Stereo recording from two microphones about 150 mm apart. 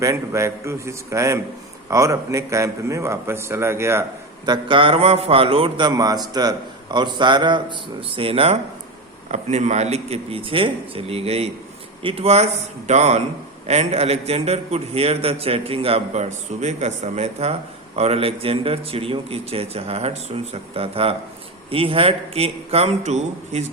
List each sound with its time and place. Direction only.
0.0 s a man's voice: 20° right (ahead or behind)
4.4 s a man's voice: 30° right (ahead or behind)
9.3 s a man's voice: 50° right (ahead or behind)